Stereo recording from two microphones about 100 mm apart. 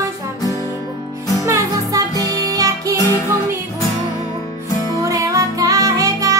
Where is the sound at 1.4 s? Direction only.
35° right (ahead or behind).